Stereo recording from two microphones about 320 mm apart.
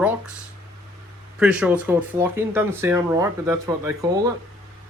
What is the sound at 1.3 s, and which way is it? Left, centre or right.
Speech, centre.